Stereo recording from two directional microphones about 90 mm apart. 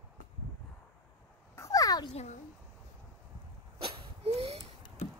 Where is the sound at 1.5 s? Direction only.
35° left (ahead or behind).